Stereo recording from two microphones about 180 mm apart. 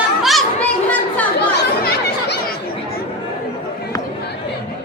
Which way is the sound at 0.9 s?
10° left (ahead or behind).